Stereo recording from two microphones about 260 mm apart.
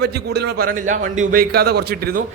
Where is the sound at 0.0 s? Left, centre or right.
Right.